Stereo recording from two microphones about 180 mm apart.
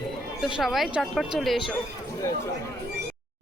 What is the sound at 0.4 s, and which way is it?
Speech, centre (ahead or behind).